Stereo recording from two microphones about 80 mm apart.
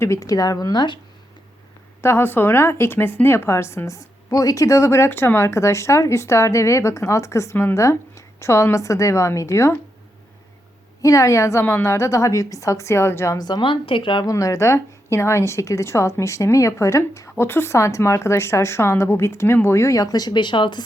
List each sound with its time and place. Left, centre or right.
0.0 s speech: left
2.0 s speech: left
11.0 s speech: left
13.4 s a woman's voice: left
14.3 s speech: left